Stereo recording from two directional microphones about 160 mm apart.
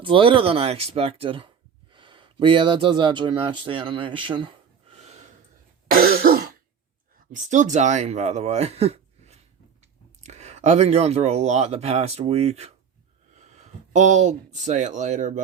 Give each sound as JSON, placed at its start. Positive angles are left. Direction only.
{"t": 0.0, "sound": "speech", "side_deg": -30}
{"t": 5.9, "sound": "throat clearing", "side_deg": -70}
{"t": 7.3, "sound": "speech", "side_deg": -50}